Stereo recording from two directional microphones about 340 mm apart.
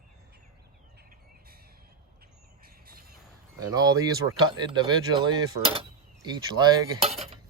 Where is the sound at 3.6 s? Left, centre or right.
Centre.